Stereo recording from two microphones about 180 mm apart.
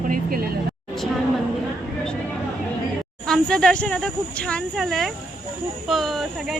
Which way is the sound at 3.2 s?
5° left (ahead or behind).